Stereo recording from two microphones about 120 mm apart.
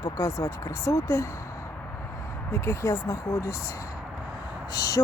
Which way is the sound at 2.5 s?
25° left (ahead or behind).